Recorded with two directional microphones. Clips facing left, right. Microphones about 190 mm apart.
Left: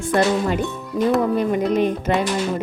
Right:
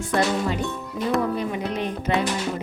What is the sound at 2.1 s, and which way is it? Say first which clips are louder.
Speech: even; 50° left (ahead or behind).